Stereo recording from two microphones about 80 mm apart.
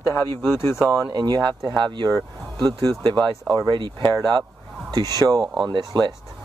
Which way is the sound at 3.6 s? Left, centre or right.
Right.